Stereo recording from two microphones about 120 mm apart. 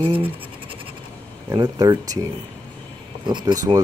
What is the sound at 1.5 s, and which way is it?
Rub, 35° right (ahead or behind).